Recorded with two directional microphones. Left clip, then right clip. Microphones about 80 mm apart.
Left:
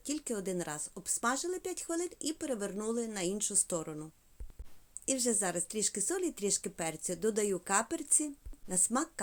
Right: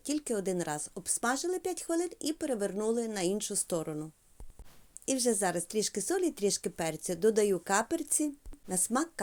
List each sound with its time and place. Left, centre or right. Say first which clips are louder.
0.0 s speech: right 4 dB; right